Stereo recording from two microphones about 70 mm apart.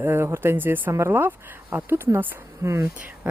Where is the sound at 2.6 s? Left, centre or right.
Right.